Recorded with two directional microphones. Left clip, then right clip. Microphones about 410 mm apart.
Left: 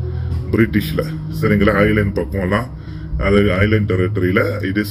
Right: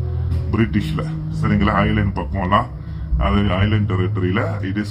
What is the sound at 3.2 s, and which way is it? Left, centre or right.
Speech, right.